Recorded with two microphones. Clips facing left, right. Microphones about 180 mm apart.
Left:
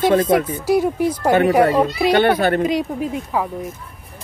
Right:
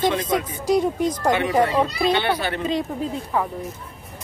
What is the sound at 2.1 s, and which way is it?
Speech, 50° left (ahead or behind).